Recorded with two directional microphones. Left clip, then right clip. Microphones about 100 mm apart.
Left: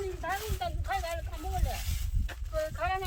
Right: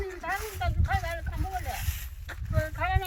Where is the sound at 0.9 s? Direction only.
30° left (ahead or behind).